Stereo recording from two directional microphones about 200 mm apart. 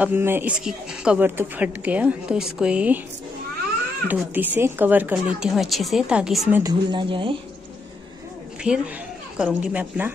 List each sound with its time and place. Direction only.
0.0 s speech: 10° right (ahead or behind)
4.1 s a woman's voice: 10° right (ahead or behind)
6.5 s speech: 20° right (ahead or behind)
8.6 s a woman's voice: 5° right (ahead or behind)